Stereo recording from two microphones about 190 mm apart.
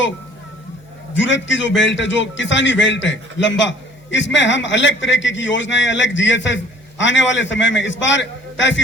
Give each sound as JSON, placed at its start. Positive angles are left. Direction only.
{"t": 1.1, "sound": "a man's voice", "side_deg": 75}